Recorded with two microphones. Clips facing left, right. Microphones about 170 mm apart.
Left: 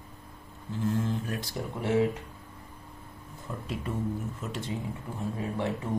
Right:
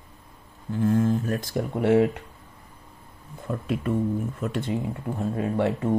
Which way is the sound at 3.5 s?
55° right (ahead or behind).